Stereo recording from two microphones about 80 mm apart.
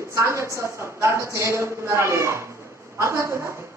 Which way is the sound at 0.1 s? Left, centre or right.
Right.